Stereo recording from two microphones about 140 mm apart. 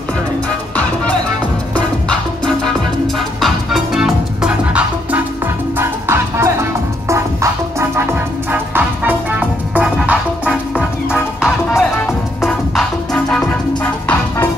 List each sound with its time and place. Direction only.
3.3 s music: centre (ahead or behind); by 6.5 s 20° right (ahead or behind)
7.9 s music: 15° right (ahead or behind)
10.5 s music: 10° left (ahead or behind)
11.8 s music: centre (ahead or behind)